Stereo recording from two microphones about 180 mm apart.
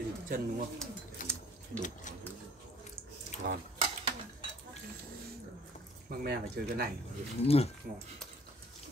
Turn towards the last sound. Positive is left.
turn(degrees=35)  # may be behind; listen again after turning